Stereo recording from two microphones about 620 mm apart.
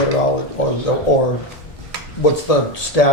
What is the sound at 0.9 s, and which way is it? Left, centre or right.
Speech, left.